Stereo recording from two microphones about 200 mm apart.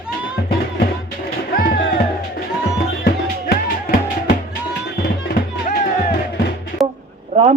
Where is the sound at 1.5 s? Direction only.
45° left (ahead or behind).